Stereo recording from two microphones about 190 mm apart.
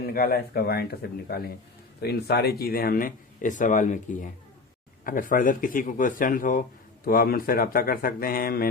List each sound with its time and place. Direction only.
0.0 s a man's voice: 55° left (ahead or behind)